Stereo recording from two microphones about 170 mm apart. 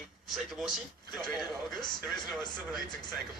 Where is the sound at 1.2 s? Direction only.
25° left (ahead or behind).